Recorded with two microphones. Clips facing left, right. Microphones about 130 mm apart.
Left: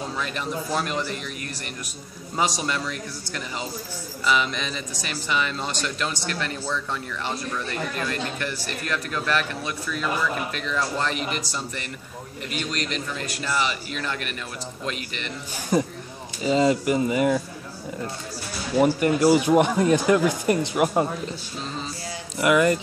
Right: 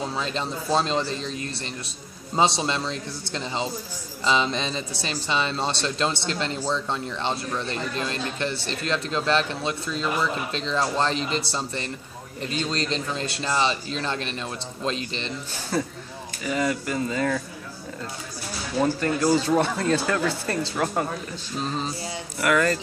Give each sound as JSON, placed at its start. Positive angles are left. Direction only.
{"t": 0.1, "sound": "speech", "side_deg": -25}
{"t": 15.7, "sound": "speech", "side_deg": 15}
{"t": 18.8, "sound": "speech", "side_deg": 15}
{"t": 22.4, "sound": "speech", "side_deg": 15}